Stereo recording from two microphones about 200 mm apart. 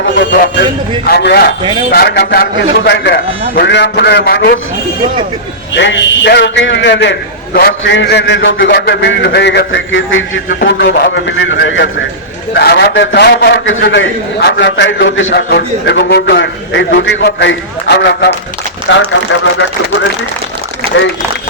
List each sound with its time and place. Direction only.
1.0 s a man's voice: 55° left (ahead or behind)
5.7 s a man's voice: 65° left (ahead or behind)
10.7 s a man's voice: 55° left (ahead or behind)
12.5 s a man's voice: 55° left (ahead or behind)